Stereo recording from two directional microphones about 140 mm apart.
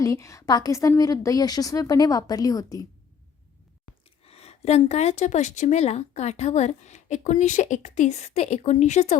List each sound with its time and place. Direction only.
0.0 s a woman's voice: 20° left (ahead or behind)
4.2 s speech: 45° left (ahead or behind)